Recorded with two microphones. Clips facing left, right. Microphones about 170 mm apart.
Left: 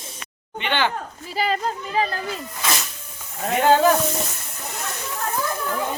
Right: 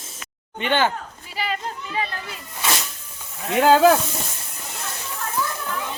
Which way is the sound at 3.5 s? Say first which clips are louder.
Right 2 dB; 90° right.